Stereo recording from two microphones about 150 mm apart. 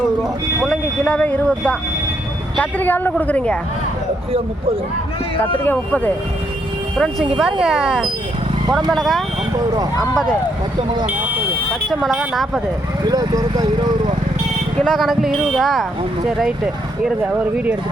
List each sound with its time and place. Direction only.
0.7 s speech: 10° left (ahead or behind)
5.6 s speech: 10° left (ahead or behind)
11.1 s buzzer: 10° right (ahead or behind)
11.7 s speech: centre (ahead or behind)
13.1 s speech: 25° right (ahead or behind)
14.8 s speech: 5° left (ahead or behind)